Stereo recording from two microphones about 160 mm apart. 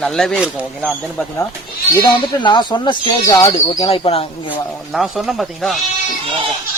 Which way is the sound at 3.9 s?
35° left (ahead or behind).